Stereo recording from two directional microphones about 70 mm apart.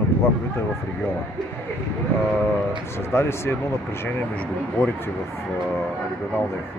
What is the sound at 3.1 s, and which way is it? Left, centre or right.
Speech, left.